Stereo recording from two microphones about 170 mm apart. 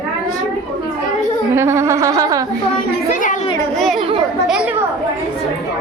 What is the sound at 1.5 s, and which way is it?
Speech, 15° right (ahead or behind).